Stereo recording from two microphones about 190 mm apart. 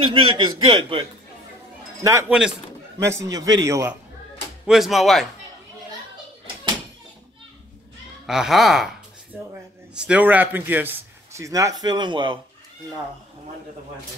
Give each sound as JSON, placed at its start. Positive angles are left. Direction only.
{"t": 0.0, "sound": "a man's voice", "side_deg": -30}
{"t": 2.0, "sound": "a man's voice", "side_deg": -15}
{"t": 4.6, "sound": "speech", "side_deg": 0}
{"t": 8.3, "sound": "a man's voice", "side_deg": 0}